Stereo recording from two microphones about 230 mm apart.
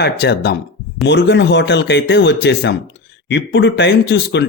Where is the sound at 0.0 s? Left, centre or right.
Left.